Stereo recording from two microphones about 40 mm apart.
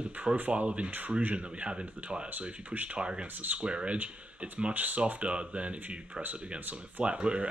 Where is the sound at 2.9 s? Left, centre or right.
Right.